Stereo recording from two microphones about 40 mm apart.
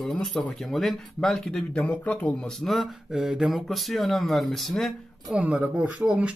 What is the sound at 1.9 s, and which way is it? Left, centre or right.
Speech, left.